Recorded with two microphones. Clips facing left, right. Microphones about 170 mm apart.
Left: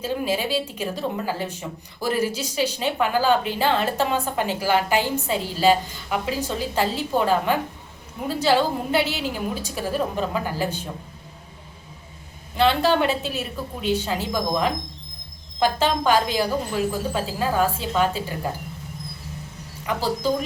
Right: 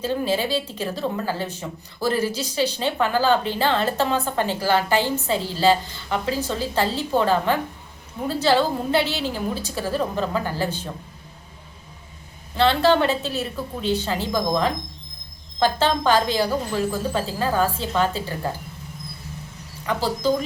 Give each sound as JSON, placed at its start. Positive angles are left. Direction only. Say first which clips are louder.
{"t": 0.0, "sound": "a woman's voice", "louder": "right 2 dB", "side_deg": 5}
{"t": 9.0, "sound": "a woman's voice", "louder": "right 1 dB", "side_deg": -35}
{"t": 9.6, "sound": "a woman's voice", "louder": "right 1 dB", "side_deg": 15}
{"t": 12.5, "sound": "a woman's voice", "louder": "right 1 dB", "side_deg": 10}
{"t": 19.8, "sound": "a woman's voice", "louder": "right 1 dB", "side_deg": 10}